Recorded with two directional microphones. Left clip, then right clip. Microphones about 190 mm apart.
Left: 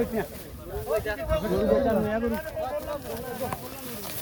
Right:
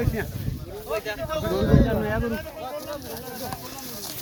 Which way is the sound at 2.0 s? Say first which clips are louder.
Even; 55° right (ahead or behind).